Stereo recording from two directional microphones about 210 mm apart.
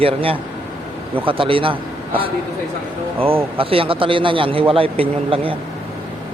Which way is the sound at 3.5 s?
25° right (ahead or behind).